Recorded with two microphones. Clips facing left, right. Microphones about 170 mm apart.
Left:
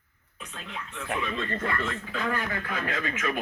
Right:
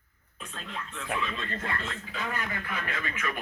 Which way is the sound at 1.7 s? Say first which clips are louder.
Left 5 dB; 60° left (ahead or behind).